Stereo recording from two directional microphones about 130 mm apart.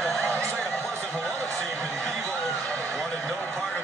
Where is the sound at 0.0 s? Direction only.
5° left (ahead or behind).